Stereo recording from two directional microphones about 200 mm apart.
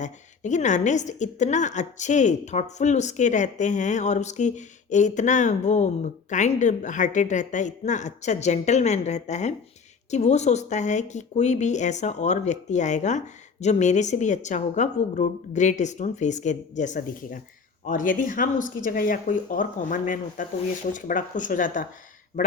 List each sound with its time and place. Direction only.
0.0 s a woman's voice: 35° left (ahead or behind)